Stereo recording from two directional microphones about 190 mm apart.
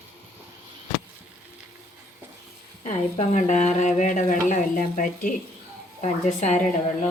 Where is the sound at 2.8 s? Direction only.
40° left (ahead or behind).